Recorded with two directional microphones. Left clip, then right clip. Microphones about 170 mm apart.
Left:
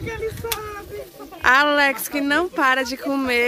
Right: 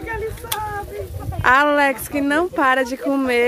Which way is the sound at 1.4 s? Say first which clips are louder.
Right 1 dB; 10° right (ahead or behind).